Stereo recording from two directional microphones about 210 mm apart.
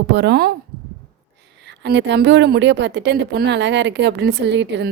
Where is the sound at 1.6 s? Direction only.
55° right (ahead or behind).